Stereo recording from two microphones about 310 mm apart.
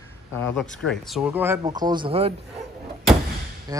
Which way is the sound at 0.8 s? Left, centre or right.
Centre.